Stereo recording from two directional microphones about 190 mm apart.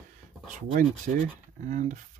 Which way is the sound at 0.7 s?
40° right (ahead or behind).